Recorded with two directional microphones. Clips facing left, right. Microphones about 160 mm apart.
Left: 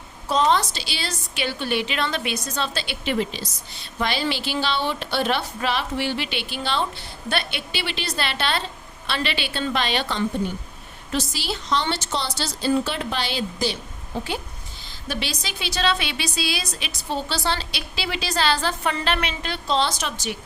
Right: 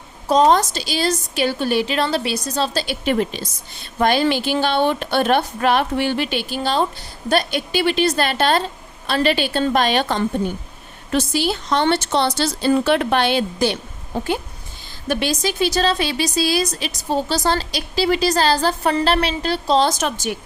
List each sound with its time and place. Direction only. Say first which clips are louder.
0.3 s a woman's voice: right 6 dB; 45° right (ahead or behind)
15.0 s a woman's voice: right 9 dB; 50° right (ahead or behind)